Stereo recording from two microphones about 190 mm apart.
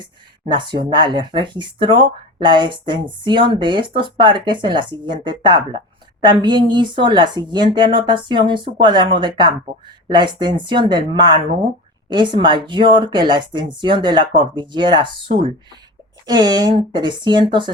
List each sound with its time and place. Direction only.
0.0 s speech: 25° right (ahead or behind)